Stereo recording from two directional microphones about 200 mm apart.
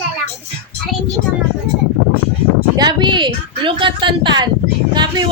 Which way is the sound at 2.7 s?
20° right (ahead or behind).